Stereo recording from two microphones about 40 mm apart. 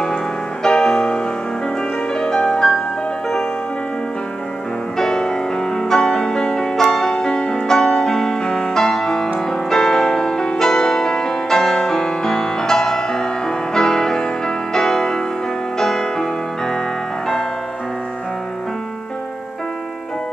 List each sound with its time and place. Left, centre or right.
0.7 s music: centre
4.9 s music: centre